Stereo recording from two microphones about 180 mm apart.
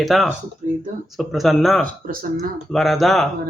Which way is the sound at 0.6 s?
45° right (ahead or behind).